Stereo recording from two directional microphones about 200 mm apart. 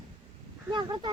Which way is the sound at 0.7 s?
25° right (ahead or behind).